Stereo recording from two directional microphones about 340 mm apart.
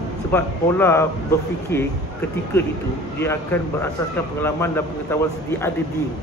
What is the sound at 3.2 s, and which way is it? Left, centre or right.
A man's voice, centre.